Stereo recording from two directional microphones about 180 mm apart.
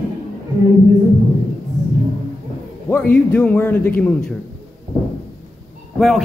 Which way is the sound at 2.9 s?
10° left (ahead or behind).